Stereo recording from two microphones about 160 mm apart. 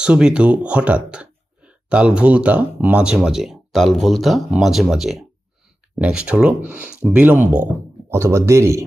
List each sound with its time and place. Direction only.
0.0 s speech: 5° right (ahead or behind)